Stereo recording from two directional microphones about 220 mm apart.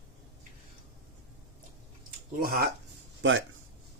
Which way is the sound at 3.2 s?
60° right (ahead or behind).